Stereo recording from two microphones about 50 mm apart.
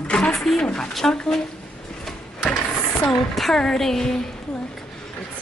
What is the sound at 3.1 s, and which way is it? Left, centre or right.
Speech, centre.